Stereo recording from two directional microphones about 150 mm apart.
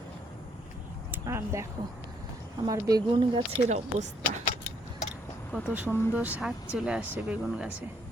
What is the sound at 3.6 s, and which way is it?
Speech, 50° right (ahead or behind).